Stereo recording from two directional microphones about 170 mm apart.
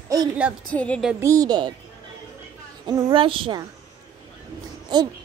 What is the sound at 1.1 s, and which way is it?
Speech, 20° right (ahead or behind).